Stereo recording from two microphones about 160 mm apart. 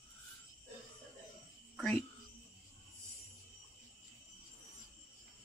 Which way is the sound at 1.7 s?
5° left (ahead or behind).